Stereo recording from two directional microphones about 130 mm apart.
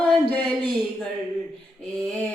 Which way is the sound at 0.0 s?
10° left (ahead or behind).